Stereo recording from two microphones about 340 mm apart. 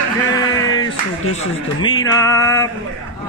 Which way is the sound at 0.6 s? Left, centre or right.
Centre.